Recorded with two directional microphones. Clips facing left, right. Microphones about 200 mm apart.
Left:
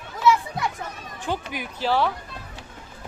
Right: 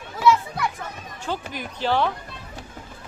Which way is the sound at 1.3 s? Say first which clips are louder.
Left 1 dB; 10° left (ahead or behind).